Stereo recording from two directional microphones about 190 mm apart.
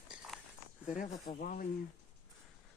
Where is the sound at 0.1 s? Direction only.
5° right (ahead or behind).